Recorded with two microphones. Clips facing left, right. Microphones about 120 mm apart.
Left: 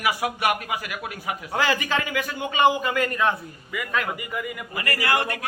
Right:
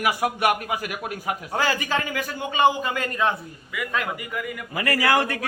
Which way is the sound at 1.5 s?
35° right (ahead or behind).